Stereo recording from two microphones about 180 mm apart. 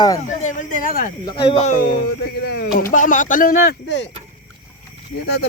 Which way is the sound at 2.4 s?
60° left (ahead or behind).